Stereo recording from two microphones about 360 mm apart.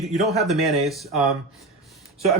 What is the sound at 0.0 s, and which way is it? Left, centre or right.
Speech, centre.